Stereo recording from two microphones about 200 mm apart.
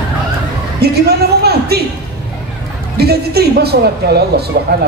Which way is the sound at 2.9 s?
50° right (ahead or behind).